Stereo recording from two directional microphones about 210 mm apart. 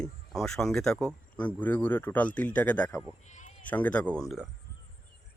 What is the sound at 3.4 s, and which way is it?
Bleat, 35° left (ahead or behind).